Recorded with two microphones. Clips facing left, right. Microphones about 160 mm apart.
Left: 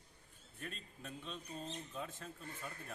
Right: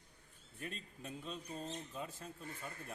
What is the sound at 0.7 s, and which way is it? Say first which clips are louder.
Speech: right 2 dB; 35° right (ahead or behind).